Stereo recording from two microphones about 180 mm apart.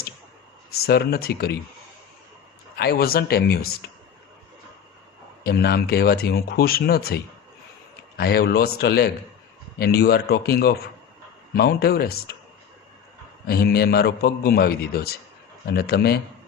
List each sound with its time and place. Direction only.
0.7 s speech: 60° left (ahead or behind)
2.7 s speech: 60° left (ahead or behind)
5.4 s speech: 60° left (ahead or behind)
13.5 s speech: 60° left (ahead or behind)